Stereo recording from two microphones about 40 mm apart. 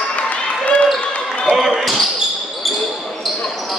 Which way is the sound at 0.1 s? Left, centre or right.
Left.